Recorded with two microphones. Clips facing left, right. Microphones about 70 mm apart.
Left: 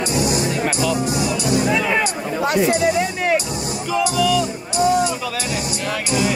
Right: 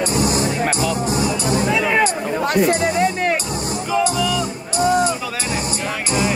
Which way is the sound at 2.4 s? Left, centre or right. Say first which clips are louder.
Left 1 dB; right.